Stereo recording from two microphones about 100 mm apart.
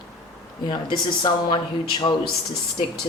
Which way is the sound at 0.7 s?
50° left (ahead or behind).